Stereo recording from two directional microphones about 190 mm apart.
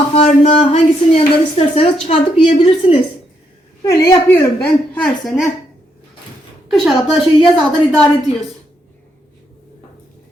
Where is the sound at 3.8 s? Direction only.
15° left (ahead or behind).